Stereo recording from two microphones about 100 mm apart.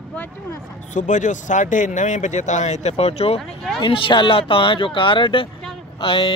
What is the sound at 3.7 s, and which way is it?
Speech, 60° left (ahead or behind).